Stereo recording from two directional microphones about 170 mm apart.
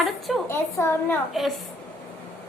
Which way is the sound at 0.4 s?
15° left (ahead or behind).